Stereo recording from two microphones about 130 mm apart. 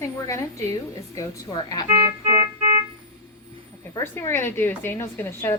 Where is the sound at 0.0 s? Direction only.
25° left (ahead or behind).